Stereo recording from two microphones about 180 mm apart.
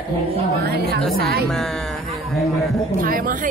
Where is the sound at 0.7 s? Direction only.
60° right (ahead or behind).